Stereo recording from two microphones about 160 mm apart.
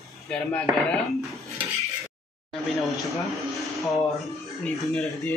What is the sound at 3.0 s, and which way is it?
Speech, centre (ahead or behind).